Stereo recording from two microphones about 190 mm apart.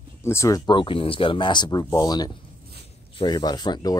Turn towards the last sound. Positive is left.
turn(degrees=25)  # may be behind; listen again after turning